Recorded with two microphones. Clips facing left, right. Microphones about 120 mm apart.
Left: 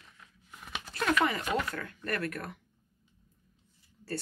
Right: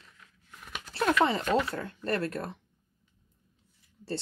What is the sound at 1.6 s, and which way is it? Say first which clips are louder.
Speech: right 4 dB; 30° right (ahead or behind).